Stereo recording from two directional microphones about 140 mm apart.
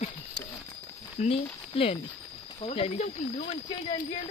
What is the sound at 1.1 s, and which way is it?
Speech, 45° left (ahead or behind).